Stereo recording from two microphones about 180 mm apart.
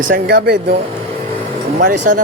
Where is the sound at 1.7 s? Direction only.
50° right (ahead or behind).